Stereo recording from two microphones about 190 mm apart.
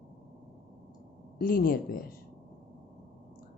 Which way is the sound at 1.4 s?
50° left (ahead or behind).